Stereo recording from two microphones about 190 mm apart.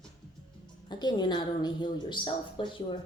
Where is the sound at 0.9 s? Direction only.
25° left (ahead or behind).